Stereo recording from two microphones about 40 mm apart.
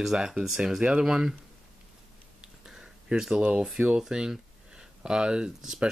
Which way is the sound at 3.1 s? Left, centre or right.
Centre.